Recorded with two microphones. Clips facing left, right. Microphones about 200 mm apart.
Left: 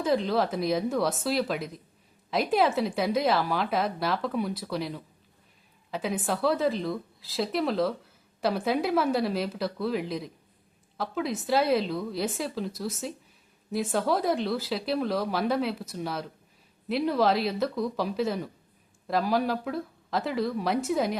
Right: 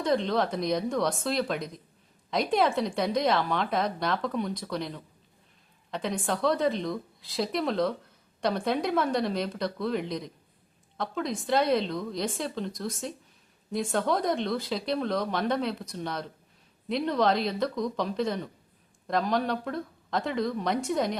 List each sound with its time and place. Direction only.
0.0 s speech: 5° left (ahead or behind)